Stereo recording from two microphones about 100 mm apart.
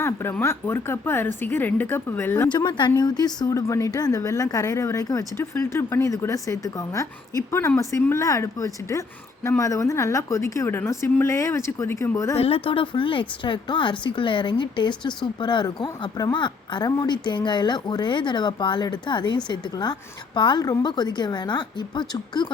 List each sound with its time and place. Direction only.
0.0 s speech: 25° left (ahead or behind)
2.5 s a woman's voice: 50° left (ahead or behind); by 12.4 s 30° left (ahead or behind)
12.4 s speech: 75° left (ahead or behind); by 22.5 s 50° left (ahead or behind)